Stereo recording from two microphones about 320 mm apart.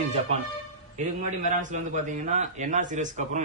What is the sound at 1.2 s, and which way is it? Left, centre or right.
A man's voice, right.